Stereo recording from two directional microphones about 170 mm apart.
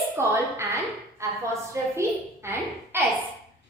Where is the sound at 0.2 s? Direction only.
15° right (ahead or behind).